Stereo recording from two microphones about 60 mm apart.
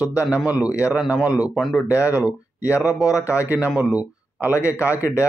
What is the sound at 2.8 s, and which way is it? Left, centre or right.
Speech, left.